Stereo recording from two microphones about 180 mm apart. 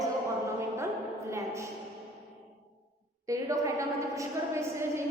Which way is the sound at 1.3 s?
15° right (ahead or behind).